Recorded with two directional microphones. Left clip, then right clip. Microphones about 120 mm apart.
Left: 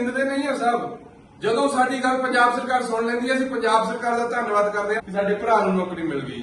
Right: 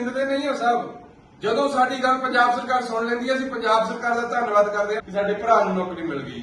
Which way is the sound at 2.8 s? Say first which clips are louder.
Left 1 dB; 55° right (ahead or behind).